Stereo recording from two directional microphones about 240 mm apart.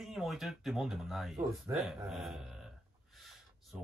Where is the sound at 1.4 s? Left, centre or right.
Centre.